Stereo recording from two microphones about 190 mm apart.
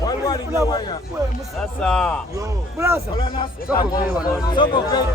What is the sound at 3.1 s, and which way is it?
Speech, 25° left (ahead or behind).